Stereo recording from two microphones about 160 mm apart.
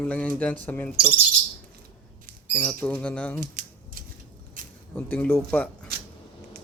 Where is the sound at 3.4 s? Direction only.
60° right (ahead or behind).